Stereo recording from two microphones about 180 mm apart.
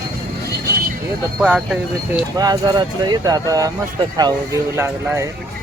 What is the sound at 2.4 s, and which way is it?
Speech, 20° right (ahead or behind).